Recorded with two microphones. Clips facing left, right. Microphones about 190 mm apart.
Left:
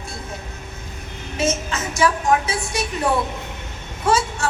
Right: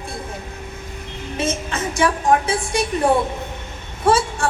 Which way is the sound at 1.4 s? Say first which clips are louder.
Left 1 dB; 30° right (ahead or behind).